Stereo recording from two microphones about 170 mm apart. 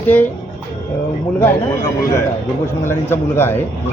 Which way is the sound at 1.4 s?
15° left (ahead or behind).